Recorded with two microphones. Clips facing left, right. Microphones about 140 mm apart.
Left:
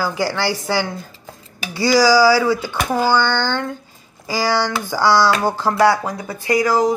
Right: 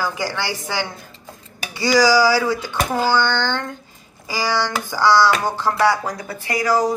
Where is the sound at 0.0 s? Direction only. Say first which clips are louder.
Left 4 dB; 10° left (ahead or behind).